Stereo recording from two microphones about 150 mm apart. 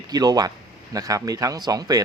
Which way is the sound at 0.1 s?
25° right (ahead or behind).